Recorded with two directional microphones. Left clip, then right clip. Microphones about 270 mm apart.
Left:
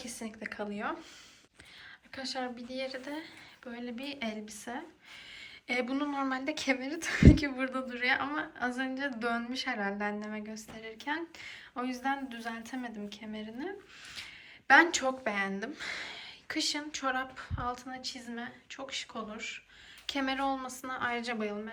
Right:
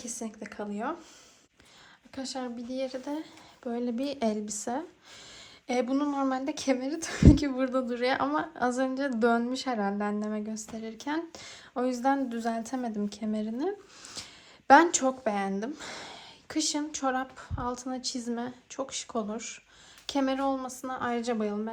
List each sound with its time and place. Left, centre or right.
0.0 s speech: centre
2.1 s speech: centre
5.6 s a woman's voice: centre
14.7 s speech: centre